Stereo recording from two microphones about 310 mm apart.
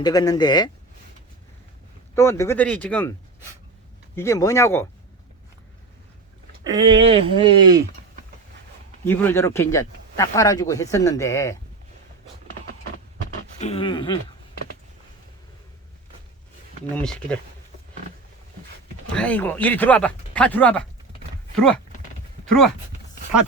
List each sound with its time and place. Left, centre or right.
0.0 s speech: centre
2.1 s speech: centre
6.7 s speech: centre
9.0 s speech: centre
13.6 s speech: centre
16.9 s speech: centre
19.1 s speech: centre
22.4 s speech: centre